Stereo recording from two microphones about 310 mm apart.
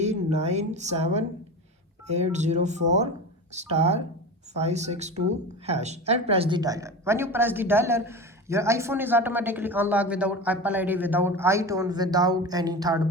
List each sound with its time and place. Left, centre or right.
0.0 s speech: right